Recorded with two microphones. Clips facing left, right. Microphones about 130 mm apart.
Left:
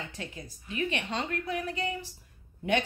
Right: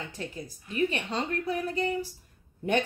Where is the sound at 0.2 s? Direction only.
40° right (ahead or behind).